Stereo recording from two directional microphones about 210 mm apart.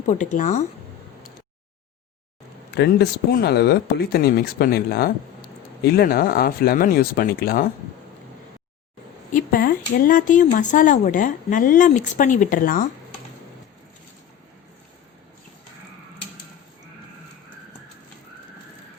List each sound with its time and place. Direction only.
0.1 s speech: 35° left (ahead or behind)
2.7 s speech: 50° left (ahead or behind)
9.3 s speech: 45° left (ahead or behind)